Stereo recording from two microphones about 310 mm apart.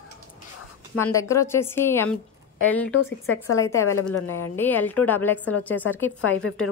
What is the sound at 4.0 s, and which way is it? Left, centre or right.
Speech, left.